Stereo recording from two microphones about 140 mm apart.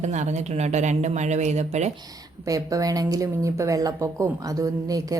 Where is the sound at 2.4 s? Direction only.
25° right (ahead or behind).